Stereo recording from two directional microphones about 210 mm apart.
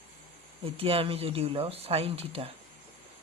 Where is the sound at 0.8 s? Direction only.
25° right (ahead or behind).